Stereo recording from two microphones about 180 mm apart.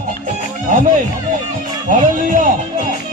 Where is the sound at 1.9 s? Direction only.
45° right (ahead or behind).